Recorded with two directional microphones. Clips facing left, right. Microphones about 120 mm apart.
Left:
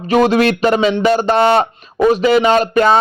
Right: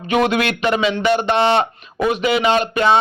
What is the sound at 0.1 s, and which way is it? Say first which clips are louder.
Speech: left 5 dB; 35° left (ahead or behind).